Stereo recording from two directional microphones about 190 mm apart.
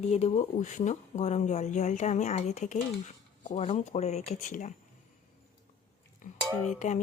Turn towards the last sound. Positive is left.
turn(degrees=40)  # may be behind; listen again after turning